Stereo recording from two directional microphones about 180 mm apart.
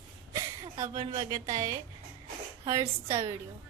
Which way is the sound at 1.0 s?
20° right (ahead or behind).